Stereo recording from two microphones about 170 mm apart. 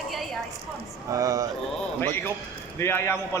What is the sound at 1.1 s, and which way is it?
Speech, 20° right (ahead or behind).